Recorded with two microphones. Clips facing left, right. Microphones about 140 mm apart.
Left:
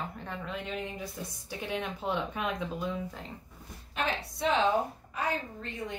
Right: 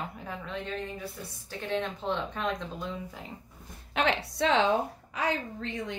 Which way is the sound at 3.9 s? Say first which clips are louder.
Right 5 dB; 75° right (ahead or behind).